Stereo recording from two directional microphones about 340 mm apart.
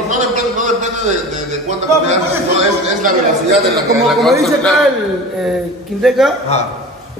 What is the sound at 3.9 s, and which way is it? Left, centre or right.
Speech, centre.